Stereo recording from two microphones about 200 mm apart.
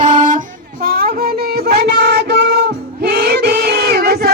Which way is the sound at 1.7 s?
55° right (ahead or behind).